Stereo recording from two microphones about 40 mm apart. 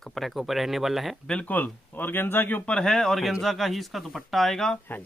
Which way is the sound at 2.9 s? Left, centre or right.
Centre.